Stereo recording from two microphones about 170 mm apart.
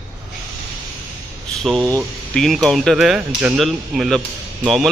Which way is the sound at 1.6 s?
Centre (ahead or behind).